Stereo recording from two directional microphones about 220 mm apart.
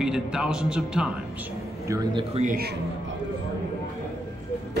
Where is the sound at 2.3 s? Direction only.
35° right (ahead or behind).